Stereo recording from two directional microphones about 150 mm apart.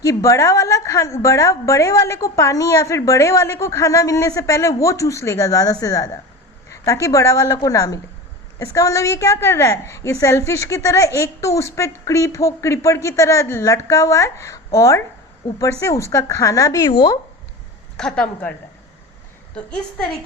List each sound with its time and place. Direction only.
0.0 s a woman's voice: 20° left (ahead or behind)
17.9 s speech: 5° left (ahead or behind)